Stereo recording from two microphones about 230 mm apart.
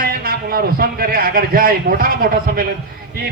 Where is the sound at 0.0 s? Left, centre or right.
Right.